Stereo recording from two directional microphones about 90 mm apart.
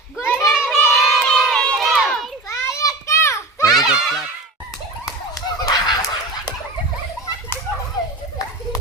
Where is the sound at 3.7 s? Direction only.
5° right (ahead or behind).